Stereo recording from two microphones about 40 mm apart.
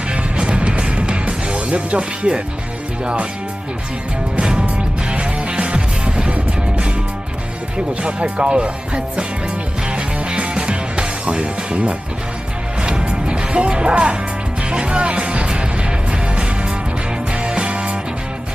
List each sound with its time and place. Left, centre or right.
0.1 s music: right
3.0 s speech: right
4.4 s music: right
8.0 s speech: right
9.8 s music: right